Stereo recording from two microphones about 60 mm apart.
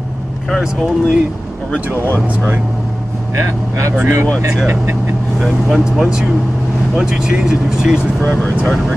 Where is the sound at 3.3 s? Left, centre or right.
Right.